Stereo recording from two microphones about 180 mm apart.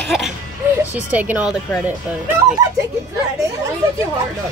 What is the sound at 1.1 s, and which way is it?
Speech, 10° right (ahead or behind).